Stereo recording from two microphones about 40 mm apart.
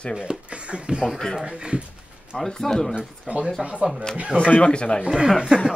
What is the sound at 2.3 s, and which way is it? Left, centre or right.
Speech, centre.